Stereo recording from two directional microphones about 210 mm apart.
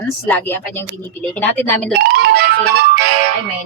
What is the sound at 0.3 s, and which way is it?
A woman's voice, 10° left (ahead or behind).